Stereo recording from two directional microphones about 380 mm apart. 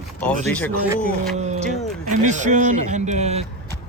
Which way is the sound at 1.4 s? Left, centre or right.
Centre.